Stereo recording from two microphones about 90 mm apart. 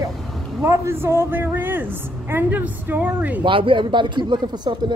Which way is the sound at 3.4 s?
70° right (ahead or behind).